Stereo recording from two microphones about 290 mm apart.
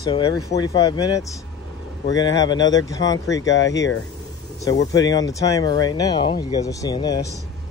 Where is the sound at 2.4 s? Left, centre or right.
Centre.